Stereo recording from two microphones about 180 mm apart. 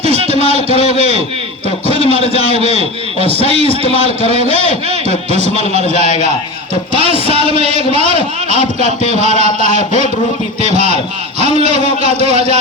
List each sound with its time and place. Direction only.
0.0 s a sound: 35° right (ahead or behind)
2.0 s a man's voice: 30° left (ahead or behind)
2.7 s a man's voice: 35° right (ahead or behind)
3.4 s a man's voice: 30° left (ahead or behind)
4.3 s a man's voice: 35° right (ahead or behind)